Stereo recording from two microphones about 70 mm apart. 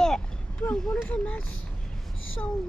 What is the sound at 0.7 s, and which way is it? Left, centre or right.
Speech, centre.